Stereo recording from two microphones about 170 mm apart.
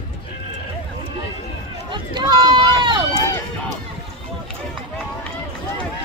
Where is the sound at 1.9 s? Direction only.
30° right (ahead or behind).